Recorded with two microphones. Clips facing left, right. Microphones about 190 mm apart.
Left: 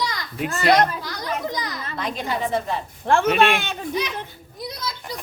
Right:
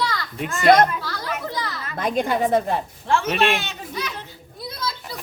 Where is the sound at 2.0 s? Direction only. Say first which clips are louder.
Right 5 dB; 50° right (ahead or behind).